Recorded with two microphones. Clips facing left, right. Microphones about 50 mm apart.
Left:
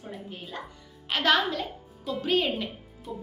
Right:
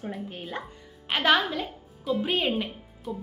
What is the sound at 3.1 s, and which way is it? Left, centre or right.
Speech, centre.